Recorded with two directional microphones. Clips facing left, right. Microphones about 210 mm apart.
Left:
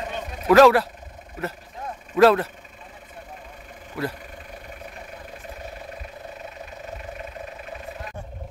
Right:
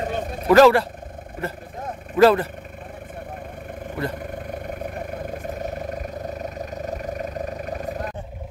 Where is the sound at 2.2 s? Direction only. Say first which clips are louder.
Right 1 dB; centre (ahead or behind).